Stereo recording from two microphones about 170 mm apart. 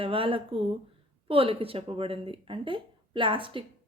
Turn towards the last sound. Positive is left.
turn(degrees=-30)  # may be behind; listen again after turning